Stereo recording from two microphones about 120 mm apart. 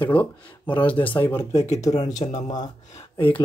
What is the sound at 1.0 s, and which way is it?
Speech, 35° left (ahead or behind).